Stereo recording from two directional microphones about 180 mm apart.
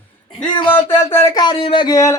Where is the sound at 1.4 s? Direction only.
30° left (ahead or behind).